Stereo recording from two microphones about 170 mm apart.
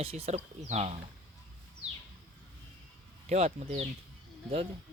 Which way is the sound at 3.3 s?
40° right (ahead or behind).